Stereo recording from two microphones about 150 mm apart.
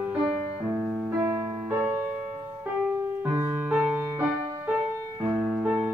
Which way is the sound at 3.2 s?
15° right (ahead or behind).